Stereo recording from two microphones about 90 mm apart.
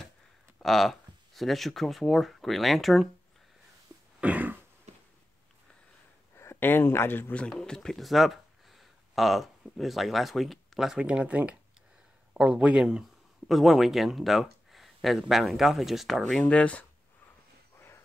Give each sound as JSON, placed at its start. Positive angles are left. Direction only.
{"t": 0.6, "sound": "speech", "side_deg": 0}
{"t": 4.2, "sound": "throat clearing", "side_deg": -15}
{"t": 6.3, "sound": "speech", "side_deg": 30}
{"t": 7.3, "sound": "speech", "side_deg": 5}
{"t": 17.7, "sound": "a sound", "side_deg": 25}